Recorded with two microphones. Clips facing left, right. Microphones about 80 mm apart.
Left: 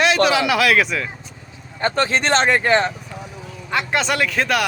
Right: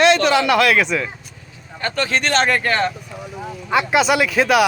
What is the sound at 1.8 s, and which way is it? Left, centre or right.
Speech, left.